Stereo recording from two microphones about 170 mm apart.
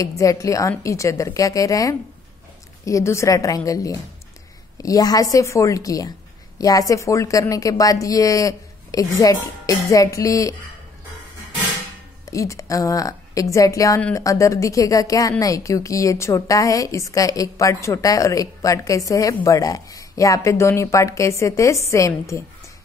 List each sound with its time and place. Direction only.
0.0 s a woman's voice: 20° left (ahead or behind)
12.3 s a woman's voice: 20° left (ahead or behind)